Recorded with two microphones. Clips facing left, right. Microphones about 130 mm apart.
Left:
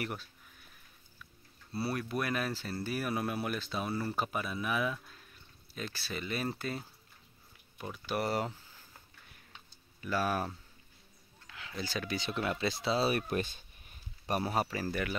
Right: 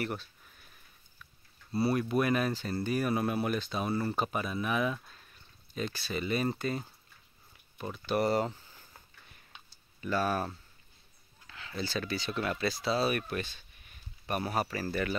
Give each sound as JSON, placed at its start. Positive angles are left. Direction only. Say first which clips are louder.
{"t": 0.0, "sound": "speech", "louder": "right 3 dB", "side_deg": 10}
{"t": 1.7, "sound": "speech", "louder": "right 6 dB", "side_deg": 0}
{"t": 7.9, "sound": "speech", "louder": "right 5 dB", "side_deg": 5}
{"t": 9.9, "sound": "speech", "louder": "right 2 dB", "side_deg": 5}